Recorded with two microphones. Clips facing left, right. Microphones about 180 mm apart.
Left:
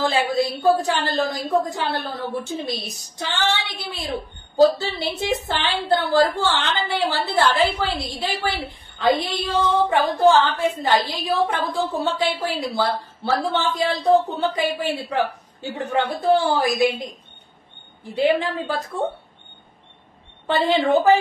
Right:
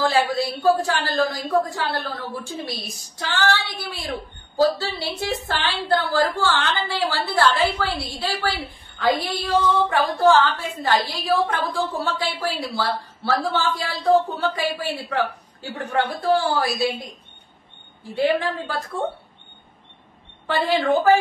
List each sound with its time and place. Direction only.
0.0 s a woman's voice: 20° left (ahead or behind)
18.1 s a woman's voice: 20° left (ahead or behind)
20.4 s a woman's voice: 20° left (ahead or behind)